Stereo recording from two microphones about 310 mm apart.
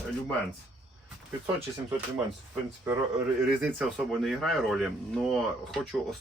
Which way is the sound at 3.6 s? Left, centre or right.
Centre.